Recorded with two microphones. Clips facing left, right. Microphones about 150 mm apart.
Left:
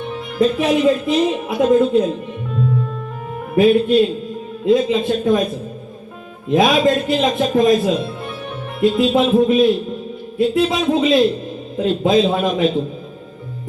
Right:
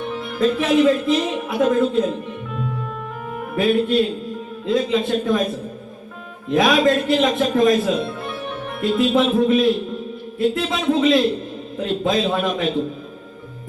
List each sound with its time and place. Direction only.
0.3 s a man's voice: 20° left (ahead or behind)
3.5 s a man's voice: 20° left (ahead or behind)
6.5 s a man's voice: 20° left (ahead or behind)